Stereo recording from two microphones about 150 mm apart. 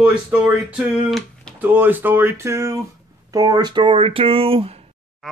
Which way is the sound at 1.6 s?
10° right (ahead or behind).